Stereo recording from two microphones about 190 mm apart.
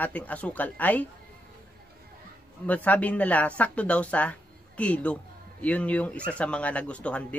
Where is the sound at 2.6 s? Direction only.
10° left (ahead or behind).